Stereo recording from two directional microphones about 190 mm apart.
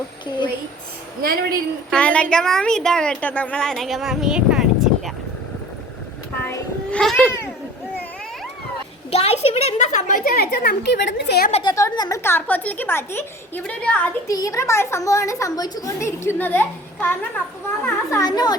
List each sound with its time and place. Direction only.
1.9 s a woman's voice: 5° left (ahead or behind)
6.4 s a sound: 10° left (ahead or behind)
9.0 s a woman's voice: 35° left (ahead or behind); by 11.5 s 55° left (ahead or behind)
11.7 s a woman's voice: 15° left (ahead or behind)